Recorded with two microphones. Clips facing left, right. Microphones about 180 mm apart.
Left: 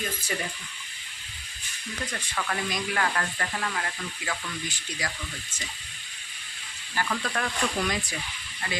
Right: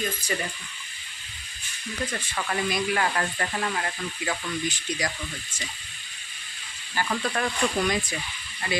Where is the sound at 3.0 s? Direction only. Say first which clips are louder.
Right 2 dB; 25° right (ahead or behind).